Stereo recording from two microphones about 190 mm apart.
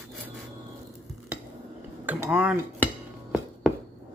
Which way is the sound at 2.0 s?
5° right (ahead or behind).